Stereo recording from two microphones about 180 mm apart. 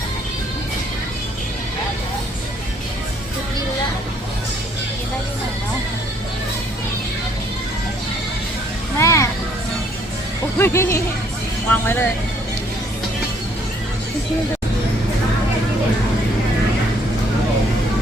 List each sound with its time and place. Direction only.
9.0 s music: 15° left (ahead or behind)
10.6 s music: 15° left (ahead or behind)